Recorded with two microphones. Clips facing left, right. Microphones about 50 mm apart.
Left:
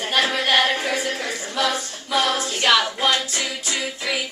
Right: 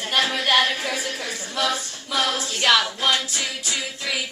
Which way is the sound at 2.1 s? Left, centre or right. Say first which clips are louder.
Left 3 dB; left.